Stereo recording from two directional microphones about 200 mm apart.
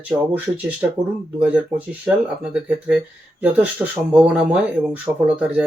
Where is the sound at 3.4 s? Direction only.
5° right (ahead or behind).